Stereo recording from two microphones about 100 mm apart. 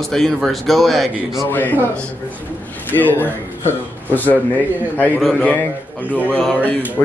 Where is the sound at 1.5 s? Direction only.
20° left (ahead or behind).